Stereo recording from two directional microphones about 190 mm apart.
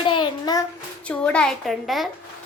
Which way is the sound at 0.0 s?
25° left (ahead or behind).